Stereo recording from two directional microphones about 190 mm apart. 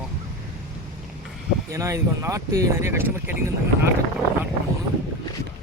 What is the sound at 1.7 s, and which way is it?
Speech, 15° right (ahead or behind).